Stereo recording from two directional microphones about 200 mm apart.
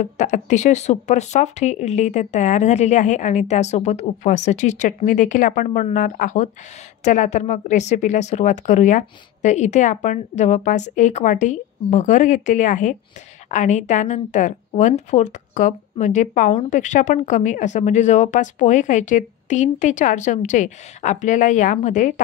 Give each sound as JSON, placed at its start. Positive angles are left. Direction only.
{"t": 0.0, "sound": "a woman's voice", "side_deg": 35}